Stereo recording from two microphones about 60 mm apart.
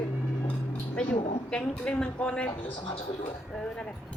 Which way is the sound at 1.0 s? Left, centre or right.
Centre.